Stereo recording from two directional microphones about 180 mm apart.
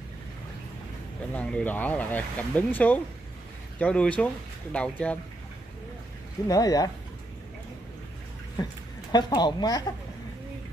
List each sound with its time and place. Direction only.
1.3 s speech: 5° left (ahead or behind)
6.4 s a woman's voice: 20° left (ahead or behind)
9.1 s a woman's voice: 25° left (ahead or behind)